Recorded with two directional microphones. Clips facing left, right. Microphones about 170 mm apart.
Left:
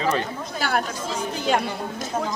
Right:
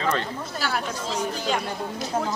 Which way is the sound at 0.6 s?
55° left (ahead or behind).